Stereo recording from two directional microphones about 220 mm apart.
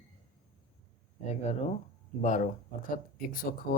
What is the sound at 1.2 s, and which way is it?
Speech, 30° left (ahead or behind).